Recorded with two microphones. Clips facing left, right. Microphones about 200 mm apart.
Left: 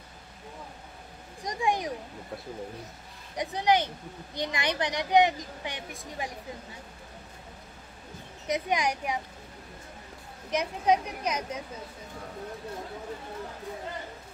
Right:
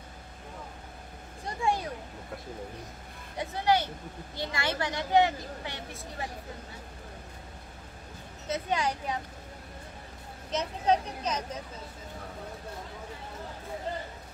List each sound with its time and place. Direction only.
1.4 s speech: 15° left (ahead or behind)
3.3 s speech: 15° left (ahead or behind)
8.5 s speech: 15° left (ahead or behind)
10.5 s speech: 10° left (ahead or behind)